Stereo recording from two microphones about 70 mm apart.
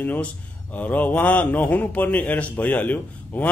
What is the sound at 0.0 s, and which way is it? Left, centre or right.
A man's voice, left.